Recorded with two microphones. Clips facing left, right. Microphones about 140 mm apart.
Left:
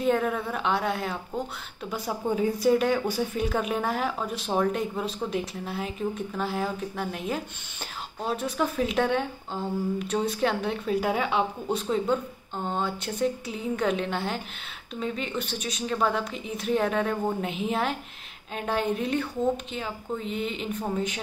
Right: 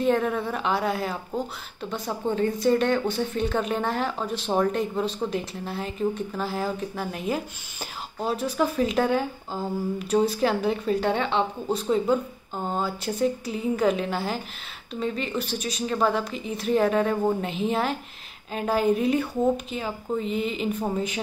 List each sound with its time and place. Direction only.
0.0 s speech: centre (ahead or behind)